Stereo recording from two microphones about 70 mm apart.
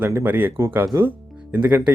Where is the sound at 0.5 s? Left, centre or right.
Right.